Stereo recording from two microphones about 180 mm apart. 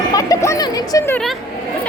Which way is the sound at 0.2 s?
20° left (ahead or behind).